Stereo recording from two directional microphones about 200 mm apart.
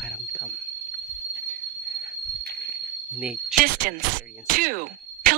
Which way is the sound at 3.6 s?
45° right (ahead or behind).